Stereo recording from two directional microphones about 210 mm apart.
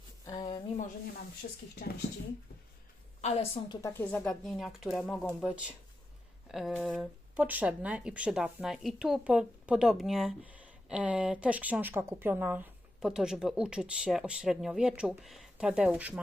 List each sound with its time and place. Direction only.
0.3 s a sound: 20° left (ahead or behind)
1.7 s speech: 50° left (ahead or behind)
3.2 s a woman's voice: 30° left (ahead or behind)
3.8 s speech: 15° left (ahead or behind); by 16.2 s 5° right (ahead or behind)